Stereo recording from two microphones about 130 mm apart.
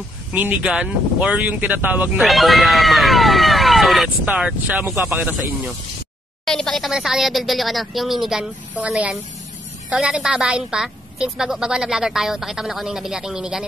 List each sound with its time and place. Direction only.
0.3 s speech: 10° right (ahead or behind)
2.2 s speech: centre (ahead or behind)
6.4 s a woman's voice: 5° left (ahead or behind)